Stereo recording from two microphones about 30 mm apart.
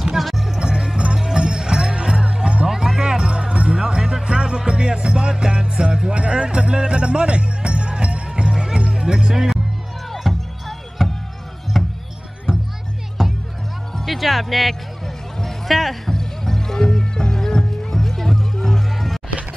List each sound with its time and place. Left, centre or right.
0.6 s music: right
2.7 s music: centre; by 8.5 s right
8.5 s music: right
10.1 s music: centre
11.7 s a sound: centre
13.2 s music: centre